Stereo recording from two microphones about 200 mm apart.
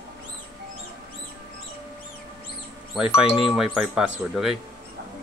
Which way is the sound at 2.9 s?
5° right (ahead or behind).